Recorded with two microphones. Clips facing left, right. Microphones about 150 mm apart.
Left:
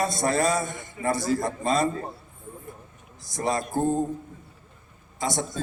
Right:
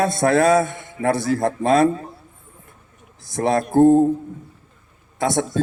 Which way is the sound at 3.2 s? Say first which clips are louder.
Right 7 dB; 60° right (ahead or behind).